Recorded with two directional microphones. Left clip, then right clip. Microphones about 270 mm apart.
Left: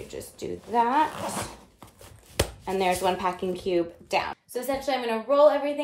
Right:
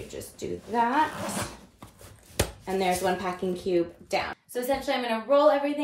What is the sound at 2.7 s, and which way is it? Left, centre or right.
A woman's voice, centre.